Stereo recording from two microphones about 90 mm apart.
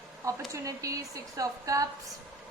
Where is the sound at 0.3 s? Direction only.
35° right (ahead or behind).